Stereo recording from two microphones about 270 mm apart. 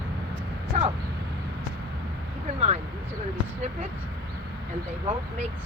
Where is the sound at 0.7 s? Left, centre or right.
Centre.